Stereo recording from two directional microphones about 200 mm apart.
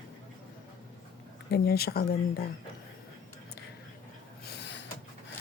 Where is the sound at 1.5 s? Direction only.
50° left (ahead or behind).